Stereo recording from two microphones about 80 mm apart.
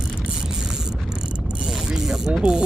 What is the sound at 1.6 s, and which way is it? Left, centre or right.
Mechanisms, centre.